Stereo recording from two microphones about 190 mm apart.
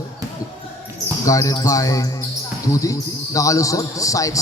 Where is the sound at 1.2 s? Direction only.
15° left (ahead or behind).